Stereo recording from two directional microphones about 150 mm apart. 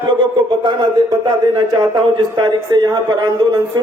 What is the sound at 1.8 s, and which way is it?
A man's voice, 30° right (ahead or behind).